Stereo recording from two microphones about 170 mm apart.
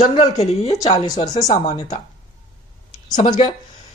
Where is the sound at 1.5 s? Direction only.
40° left (ahead or behind).